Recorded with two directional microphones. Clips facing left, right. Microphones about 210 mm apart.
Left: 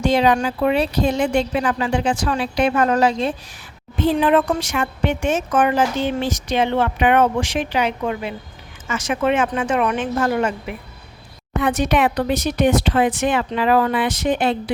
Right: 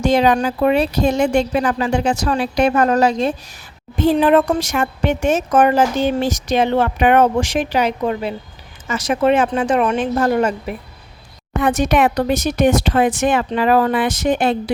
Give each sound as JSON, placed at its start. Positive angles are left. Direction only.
{"t": 0.0, "sound": "a woman's voice", "side_deg": -45}